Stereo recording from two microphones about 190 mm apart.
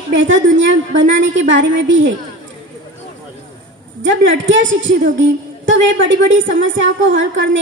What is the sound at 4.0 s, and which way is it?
A woman's voice, 80° right.